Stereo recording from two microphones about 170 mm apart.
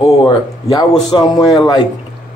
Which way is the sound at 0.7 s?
25° left (ahead or behind).